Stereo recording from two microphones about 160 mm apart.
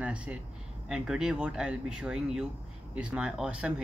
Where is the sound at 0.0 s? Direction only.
5° right (ahead or behind).